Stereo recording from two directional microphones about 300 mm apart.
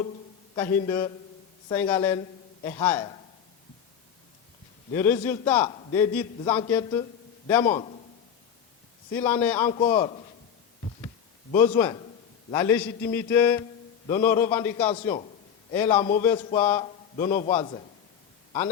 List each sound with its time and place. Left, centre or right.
0.5 s a man's voice: centre
4.9 s a man's voice: centre
9.1 s a man's voice: centre
9.7 s a man's voice: centre
11.5 s a man's voice: centre